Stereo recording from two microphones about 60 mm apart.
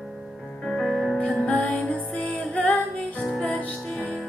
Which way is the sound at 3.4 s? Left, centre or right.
Left.